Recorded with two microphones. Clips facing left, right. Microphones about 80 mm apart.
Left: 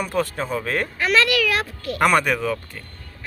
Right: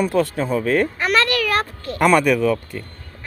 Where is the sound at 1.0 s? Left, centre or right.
Right.